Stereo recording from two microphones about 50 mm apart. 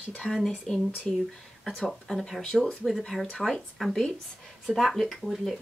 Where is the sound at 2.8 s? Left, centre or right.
Centre.